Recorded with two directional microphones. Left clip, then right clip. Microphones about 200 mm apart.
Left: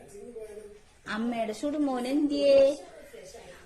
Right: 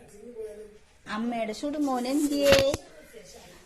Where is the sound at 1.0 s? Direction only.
5° left (ahead or behind).